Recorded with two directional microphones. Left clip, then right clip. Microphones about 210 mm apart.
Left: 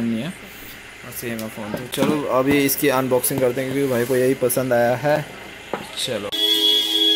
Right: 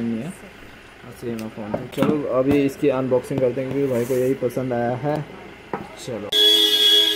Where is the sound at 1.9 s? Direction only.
Centre (ahead or behind).